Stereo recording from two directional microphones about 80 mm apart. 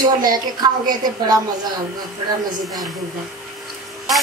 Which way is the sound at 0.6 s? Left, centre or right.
Right.